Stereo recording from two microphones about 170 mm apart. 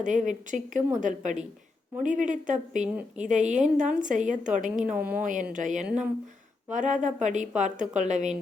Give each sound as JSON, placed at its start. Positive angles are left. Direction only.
{"t": 0.0, "sound": "a woman's voice", "side_deg": -45}
{"t": 4.9, "sound": "speech", "side_deg": -10}
{"t": 5.2, "sound": "a woman's voice", "side_deg": -50}